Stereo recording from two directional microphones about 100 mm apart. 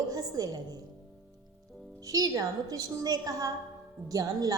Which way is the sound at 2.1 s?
40° right (ahead or behind).